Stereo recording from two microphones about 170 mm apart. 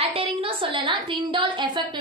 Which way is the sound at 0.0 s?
35° right (ahead or behind).